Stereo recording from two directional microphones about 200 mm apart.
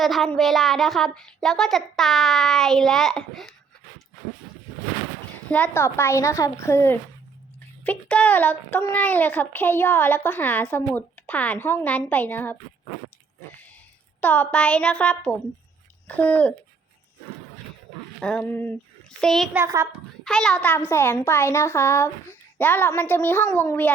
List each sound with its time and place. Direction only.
0.0 s a child's voice: centre (ahead or behind)
5.5 s a woman's voice: 5° left (ahead or behind)
14.2 s a child's voice: 10° left (ahead or behind)
18.2 s a child's voice: 5° left (ahead or behind)
19.5 s a child's voice: 15° right (ahead or behind)
20.2 s a child's voice: centre (ahead or behind)